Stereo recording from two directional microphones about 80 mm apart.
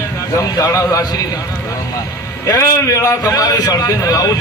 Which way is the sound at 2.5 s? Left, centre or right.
Left.